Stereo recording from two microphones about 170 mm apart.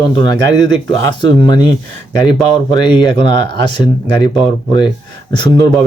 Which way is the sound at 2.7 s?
25° left (ahead or behind).